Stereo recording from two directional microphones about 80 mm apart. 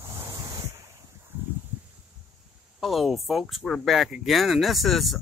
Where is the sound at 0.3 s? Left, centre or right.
Right.